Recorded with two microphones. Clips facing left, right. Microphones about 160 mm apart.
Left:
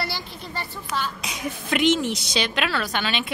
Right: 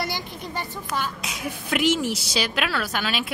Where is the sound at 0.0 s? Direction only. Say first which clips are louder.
Right 1 dB; 15° right (ahead or behind).